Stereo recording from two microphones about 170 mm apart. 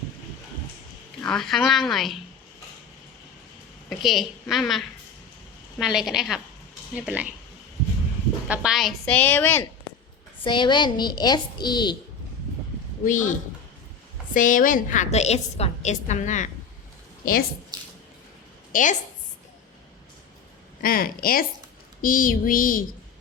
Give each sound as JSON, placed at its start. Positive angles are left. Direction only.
{"t": 1.2, "sound": "a woman's voice", "side_deg": 5}
{"t": 3.8, "sound": "a woman's voice", "side_deg": 0}
{"t": 8.4, "sound": "a woman's voice", "side_deg": -5}
{"t": 10.4, "sound": "a woman's voice", "side_deg": 30}
{"t": 13.1, "sound": "a woman's voice", "side_deg": 50}
{"t": 14.3, "sound": "a woman's voice", "side_deg": 50}
{"t": 17.7, "sound": "squish", "side_deg": -25}
{"t": 18.7, "sound": "a woman's voice", "side_deg": 50}
{"t": 20.8, "sound": "a sound", "side_deg": 60}